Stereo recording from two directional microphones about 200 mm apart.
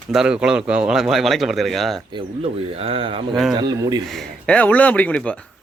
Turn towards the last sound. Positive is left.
turn(degrees=5)  # may be behind; listen again after turning